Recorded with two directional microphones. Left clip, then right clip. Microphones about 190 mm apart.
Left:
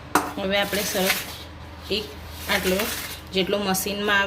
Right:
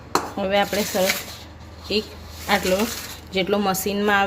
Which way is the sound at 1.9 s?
50° right (ahead or behind).